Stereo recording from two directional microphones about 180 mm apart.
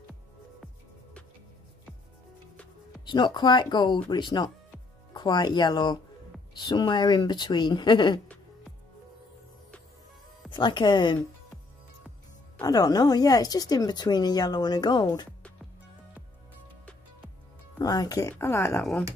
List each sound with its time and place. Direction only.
3.1 s a woman's voice: 25° left (ahead or behind)
10.5 s a woman's voice: 25° left (ahead or behind)
12.6 s a woman's voice: 20° left (ahead or behind)
17.7 s a woman's voice: 20° left (ahead or behind)